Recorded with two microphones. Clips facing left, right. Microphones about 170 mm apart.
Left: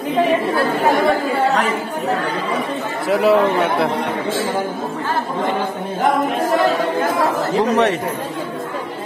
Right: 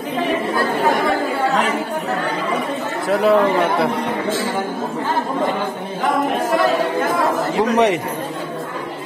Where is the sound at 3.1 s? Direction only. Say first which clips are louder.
Even; centre (ahead or behind).